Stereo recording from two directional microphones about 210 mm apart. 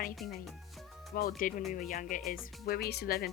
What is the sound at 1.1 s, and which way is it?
A woman's voice, 45° left (ahead or behind).